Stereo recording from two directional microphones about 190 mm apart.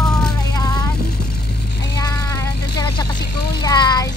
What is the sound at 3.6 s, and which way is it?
Speech, 20° left (ahead or behind).